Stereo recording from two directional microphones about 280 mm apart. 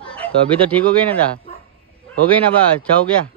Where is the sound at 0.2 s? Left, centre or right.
Centre.